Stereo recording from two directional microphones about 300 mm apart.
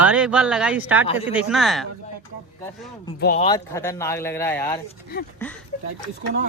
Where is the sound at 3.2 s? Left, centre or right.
Left.